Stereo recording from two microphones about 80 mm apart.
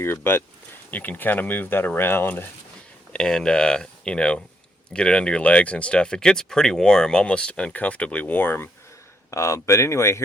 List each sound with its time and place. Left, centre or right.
0.0 s speech: left
3.1 s speech: centre; by 8.7 s left
9.3 s speech: left